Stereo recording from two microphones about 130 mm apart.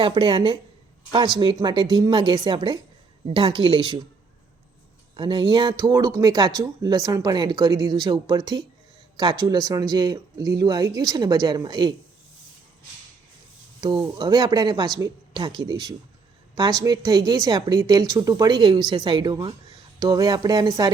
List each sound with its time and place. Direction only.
0.0 s speech: 40° right (ahead or behind)
1.6 s speech: 35° right (ahead or behind)
5.1 s speech: 40° right (ahead or behind)
13.8 s speech: 35° right (ahead or behind)